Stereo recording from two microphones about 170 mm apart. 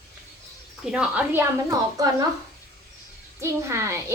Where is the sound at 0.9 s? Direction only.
5° right (ahead or behind).